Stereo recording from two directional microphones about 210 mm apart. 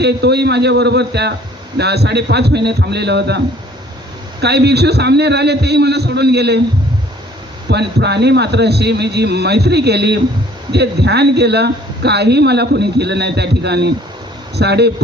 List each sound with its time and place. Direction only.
0.0 s a man's voice: 50° right (ahead or behind)
7.7 s a man's voice: 55° right (ahead or behind)